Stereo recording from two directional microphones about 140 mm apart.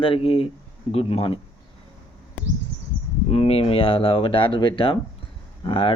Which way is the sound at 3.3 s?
45° left (ahead or behind).